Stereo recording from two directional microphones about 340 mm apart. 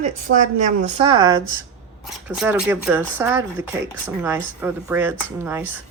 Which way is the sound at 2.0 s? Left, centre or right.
Centre.